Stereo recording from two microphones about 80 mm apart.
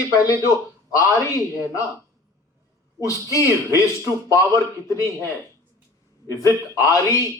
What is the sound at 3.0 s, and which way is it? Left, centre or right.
A man's voice, left.